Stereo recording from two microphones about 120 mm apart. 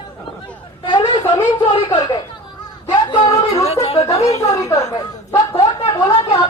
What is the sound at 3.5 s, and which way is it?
Chatter, 60° left (ahead or behind).